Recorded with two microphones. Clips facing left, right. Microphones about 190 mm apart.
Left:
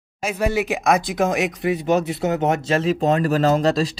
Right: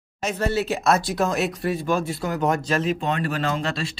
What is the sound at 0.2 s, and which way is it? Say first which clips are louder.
Speech: left 2 dB; 10° left (ahead or behind).